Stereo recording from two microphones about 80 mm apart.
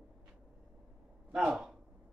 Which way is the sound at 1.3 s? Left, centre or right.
Centre.